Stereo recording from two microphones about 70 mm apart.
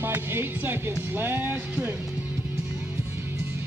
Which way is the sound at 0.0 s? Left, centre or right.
Right.